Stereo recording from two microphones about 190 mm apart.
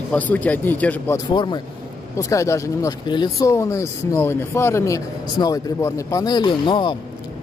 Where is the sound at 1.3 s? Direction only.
25° left (ahead or behind).